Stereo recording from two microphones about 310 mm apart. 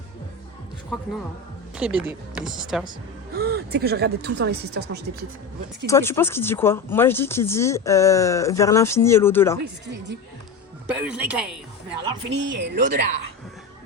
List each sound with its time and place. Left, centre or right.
1.7 s speech: centre
3.3 s speech: right
5.8 s speech: centre
10.9 s speech: centre
12.3 s speech: right